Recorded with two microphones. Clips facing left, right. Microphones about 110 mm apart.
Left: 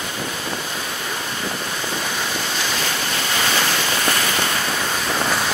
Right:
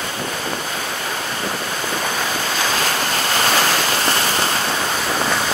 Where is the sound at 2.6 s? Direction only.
45° right (ahead or behind).